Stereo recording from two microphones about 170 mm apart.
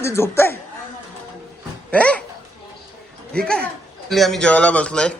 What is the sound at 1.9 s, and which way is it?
Speech, 10° left (ahead or behind).